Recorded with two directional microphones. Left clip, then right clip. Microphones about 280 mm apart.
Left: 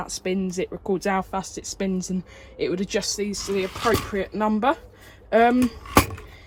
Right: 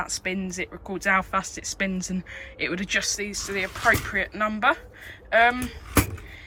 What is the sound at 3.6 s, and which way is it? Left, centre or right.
Speech, centre.